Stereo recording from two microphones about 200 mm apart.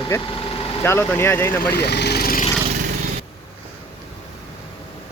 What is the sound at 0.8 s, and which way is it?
Speech, 10° left (ahead or behind).